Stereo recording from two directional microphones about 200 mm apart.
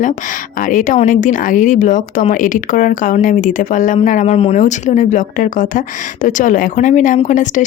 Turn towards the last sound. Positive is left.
turn(degrees=40)  # may be behind; listen again after turning